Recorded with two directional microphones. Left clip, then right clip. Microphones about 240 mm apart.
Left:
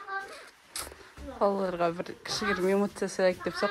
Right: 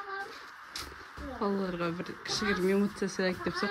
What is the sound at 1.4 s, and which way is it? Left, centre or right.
Speech, centre.